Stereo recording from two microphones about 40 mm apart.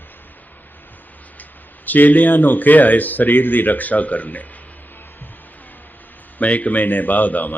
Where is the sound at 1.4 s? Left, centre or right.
Left.